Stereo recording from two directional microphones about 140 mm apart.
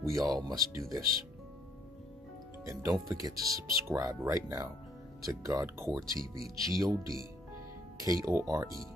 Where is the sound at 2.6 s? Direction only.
20° right (ahead or behind).